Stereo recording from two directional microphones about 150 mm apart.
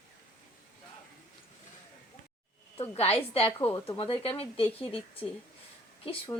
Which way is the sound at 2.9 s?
40° left (ahead or behind).